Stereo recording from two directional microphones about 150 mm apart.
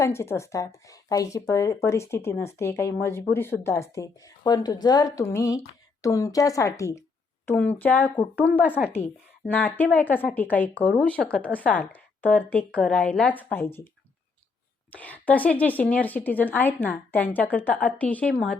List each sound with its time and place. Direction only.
0.0 s speech: 15° left (ahead or behind)
7.4 s a woman's voice: 10° left (ahead or behind)
9.5 s a woman's voice: 10° left (ahead or behind)
14.9 s a woman's voice: 10° left (ahead or behind)